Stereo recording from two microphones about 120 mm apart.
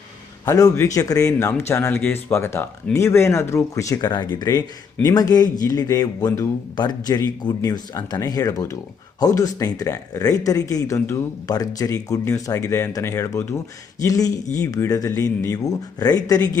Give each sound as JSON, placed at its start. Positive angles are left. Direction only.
{"t": 0.4, "sound": "speech", "side_deg": 25}